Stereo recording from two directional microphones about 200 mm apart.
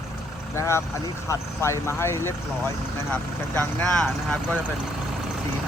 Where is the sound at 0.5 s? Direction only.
15° left (ahead or behind).